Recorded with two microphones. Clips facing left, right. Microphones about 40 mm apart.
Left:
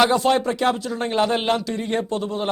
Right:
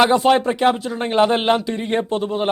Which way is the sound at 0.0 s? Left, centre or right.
Right.